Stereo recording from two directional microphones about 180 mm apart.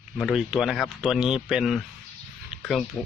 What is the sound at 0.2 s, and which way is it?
Speech, 5° right (ahead or behind).